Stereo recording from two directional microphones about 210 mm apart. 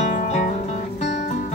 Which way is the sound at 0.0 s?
35° left (ahead or behind).